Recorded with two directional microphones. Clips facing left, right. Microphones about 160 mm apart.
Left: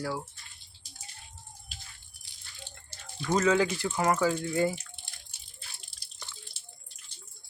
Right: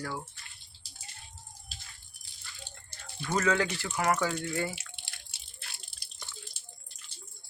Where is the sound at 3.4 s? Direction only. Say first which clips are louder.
Left 4 dB; 15° left (ahead or behind).